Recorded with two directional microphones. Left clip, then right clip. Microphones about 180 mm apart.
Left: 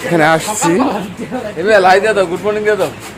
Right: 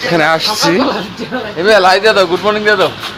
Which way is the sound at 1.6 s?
5° right (ahead or behind).